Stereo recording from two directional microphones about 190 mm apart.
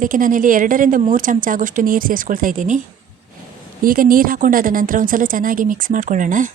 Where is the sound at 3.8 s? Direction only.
50° right (ahead or behind).